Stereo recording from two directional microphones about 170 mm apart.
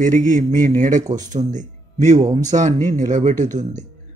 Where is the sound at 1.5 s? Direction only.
45° right (ahead or behind).